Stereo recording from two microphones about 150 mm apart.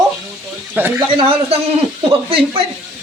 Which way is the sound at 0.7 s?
15° right (ahead or behind).